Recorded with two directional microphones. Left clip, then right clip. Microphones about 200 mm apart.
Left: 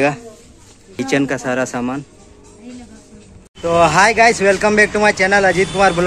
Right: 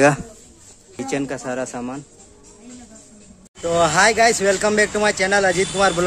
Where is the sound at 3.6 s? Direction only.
10° right (ahead or behind).